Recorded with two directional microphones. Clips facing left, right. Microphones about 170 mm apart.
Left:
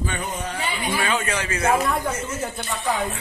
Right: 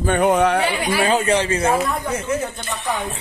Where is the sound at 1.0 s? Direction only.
35° right (ahead or behind).